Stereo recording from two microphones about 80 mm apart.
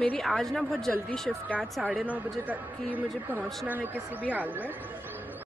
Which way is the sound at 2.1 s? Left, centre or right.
Right.